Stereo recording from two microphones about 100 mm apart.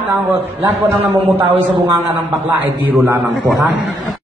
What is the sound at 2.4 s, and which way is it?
Speech, 20° right (ahead or behind).